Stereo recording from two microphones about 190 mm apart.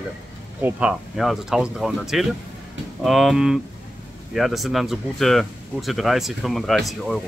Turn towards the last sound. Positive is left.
turn(degrees=0)  # may be behind; listen again after turning